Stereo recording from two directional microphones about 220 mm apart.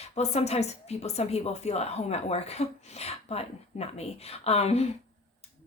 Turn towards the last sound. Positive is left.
turn(degrees=30)  # may be behind; listen again after turning